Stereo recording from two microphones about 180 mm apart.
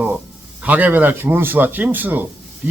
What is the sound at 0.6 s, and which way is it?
Speech, 10° right (ahead or behind).